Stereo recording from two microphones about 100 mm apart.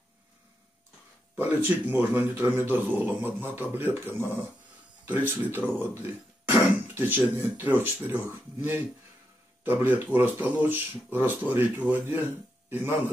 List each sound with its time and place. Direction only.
1.4 s speech: 20° right (ahead or behind)